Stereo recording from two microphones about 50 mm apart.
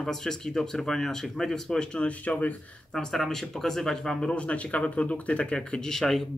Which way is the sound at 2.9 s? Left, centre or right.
Centre.